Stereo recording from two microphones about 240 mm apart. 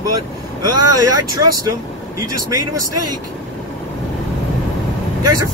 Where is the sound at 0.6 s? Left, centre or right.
Right.